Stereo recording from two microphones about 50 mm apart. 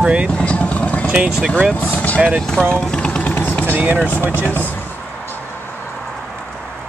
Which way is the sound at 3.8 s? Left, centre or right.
Right.